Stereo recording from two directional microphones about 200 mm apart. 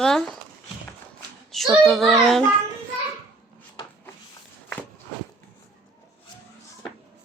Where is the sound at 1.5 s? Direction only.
Centre (ahead or behind).